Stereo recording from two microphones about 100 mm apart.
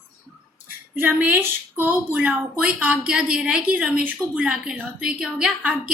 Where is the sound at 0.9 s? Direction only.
20° right (ahead or behind).